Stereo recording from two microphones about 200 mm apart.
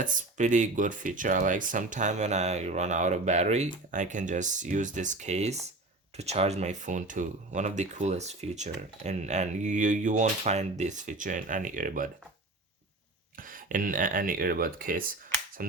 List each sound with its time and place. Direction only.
0.0 s speech: 40° right (ahead or behind)
13.3 s speech: 45° right (ahead or behind)